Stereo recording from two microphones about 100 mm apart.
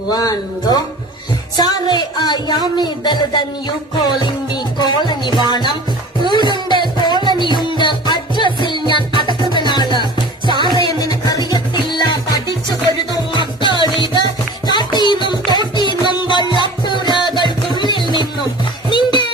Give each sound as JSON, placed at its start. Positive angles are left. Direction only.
{"t": 0.1, "sound": "speech", "side_deg": 40}
{"t": 1.5, "sound": "a sound", "side_deg": 45}
{"t": 2.7, "sound": "music", "side_deg": 45}
{"t": 13.3, "sound": "music", "side_deg": 50}